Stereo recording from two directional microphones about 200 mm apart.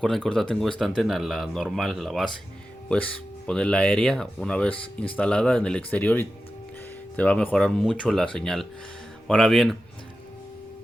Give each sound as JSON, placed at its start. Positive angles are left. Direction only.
{"t": 0.0, "sound": "speech", "side_deg": 0}